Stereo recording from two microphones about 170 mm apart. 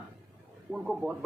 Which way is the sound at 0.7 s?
Centre (ahead or behind).